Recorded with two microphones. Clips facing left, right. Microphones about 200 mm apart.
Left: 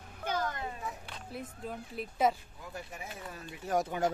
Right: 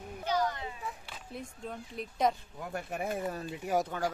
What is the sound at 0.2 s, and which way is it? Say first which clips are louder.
Children playing: right 3 dB; 50° left (ahead or behind).